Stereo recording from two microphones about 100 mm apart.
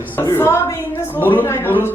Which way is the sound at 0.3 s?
25° left (ahead or behind).